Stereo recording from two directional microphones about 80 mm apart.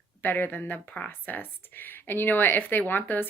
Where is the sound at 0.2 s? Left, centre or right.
Left.